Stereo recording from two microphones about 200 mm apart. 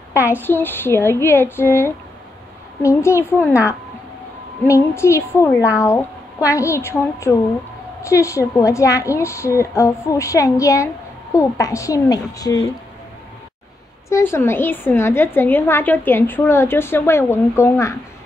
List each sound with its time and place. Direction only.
0.1 s a woman's voice: 10° right (ahead or behind)
0.4 s a woman's voice: 10° left (ahead or behind)
4.6 s a woman's voice: 15° left (ahead or behind)
14.0 s a woman's voice: 15° left (ahead or behind)